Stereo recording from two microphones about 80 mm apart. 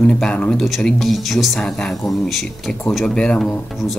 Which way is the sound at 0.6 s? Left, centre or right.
Centre.